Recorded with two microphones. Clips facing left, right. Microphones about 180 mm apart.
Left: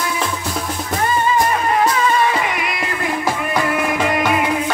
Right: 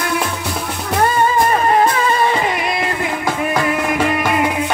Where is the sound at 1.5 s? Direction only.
40° right (ahead or behind).